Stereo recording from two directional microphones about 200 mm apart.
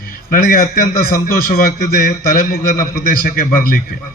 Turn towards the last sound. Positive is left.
turn(degrees=45)  # may be behind; listen again after turning